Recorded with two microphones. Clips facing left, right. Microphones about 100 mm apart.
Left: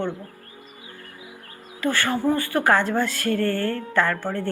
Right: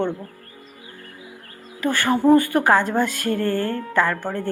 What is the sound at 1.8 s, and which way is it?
A woman's voice, 15° right (ahead or behind).